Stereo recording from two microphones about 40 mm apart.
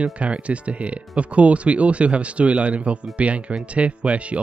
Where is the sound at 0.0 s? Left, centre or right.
Right.